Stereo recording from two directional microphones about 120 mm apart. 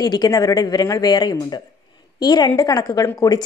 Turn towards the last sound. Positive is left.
turn(degrees=25)  # may be behind; listen again after turning